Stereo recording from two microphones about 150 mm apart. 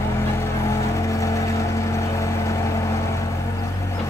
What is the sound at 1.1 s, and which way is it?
Vehicle, 20° left (ahead or behind).